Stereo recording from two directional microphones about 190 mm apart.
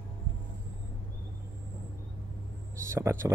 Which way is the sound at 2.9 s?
15° right (ahead or behind).